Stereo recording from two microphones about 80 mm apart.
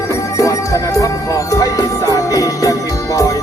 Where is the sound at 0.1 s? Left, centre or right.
Left.